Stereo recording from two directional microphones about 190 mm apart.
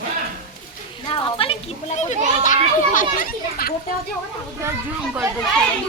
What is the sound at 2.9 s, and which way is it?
Speech, 50° left (ahead or behind).